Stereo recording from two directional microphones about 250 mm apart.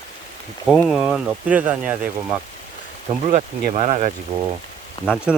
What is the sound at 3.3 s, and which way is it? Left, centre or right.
Speech, right.